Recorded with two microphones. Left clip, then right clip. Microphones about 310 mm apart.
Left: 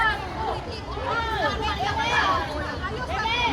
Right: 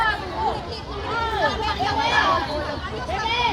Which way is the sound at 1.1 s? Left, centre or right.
Right.